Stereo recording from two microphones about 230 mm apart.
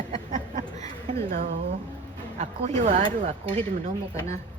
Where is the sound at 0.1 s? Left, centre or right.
Right.